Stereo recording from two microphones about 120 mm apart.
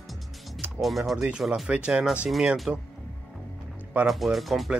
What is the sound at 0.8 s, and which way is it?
Speech, centre (ahead or behind).